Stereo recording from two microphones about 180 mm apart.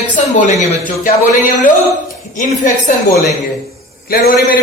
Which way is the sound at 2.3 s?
45° left (ahead or behind).